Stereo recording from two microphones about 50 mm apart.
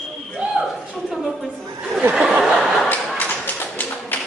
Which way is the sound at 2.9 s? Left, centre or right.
Left.